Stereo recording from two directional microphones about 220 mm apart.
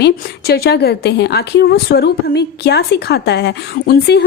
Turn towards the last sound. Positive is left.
turn(degrees=45)  # may be behind; listen again after turning